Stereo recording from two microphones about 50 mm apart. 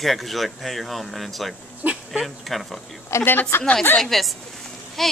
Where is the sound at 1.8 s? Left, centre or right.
Right.